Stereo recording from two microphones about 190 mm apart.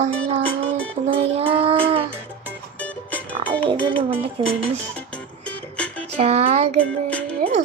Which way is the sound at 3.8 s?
25° right (ahead or behind).